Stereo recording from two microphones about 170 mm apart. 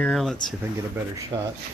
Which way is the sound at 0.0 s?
Centre (ahead or behind).